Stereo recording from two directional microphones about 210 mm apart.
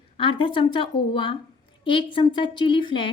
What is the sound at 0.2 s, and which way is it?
A woman's voice, 25° left (ahead or behind).